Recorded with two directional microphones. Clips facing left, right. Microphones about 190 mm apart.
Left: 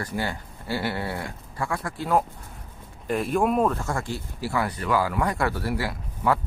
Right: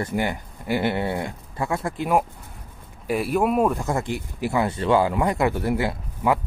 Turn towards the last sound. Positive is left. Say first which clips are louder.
# right 2 dB
turn(degrees=-20)  # may be behind; listen again after turning